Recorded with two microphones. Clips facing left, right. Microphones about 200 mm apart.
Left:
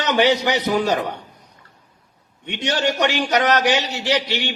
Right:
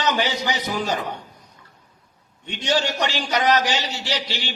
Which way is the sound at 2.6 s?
60° left (ahead or behind).